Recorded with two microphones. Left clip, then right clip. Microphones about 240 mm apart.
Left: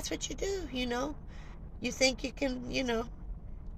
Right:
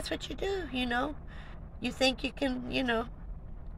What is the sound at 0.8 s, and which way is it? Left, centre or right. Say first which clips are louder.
Speech: right 3 dB; centre.